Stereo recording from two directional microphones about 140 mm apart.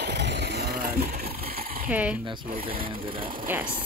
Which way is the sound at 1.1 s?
90° right.